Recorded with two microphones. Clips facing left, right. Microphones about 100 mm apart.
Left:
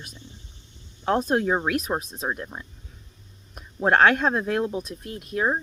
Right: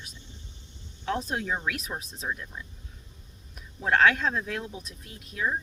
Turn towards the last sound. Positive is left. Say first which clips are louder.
# left 6 dB
turn(degrees=55)  # may be behind; listen again after turning